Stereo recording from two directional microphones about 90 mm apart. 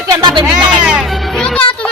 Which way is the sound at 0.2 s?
60° right (ahead or behind).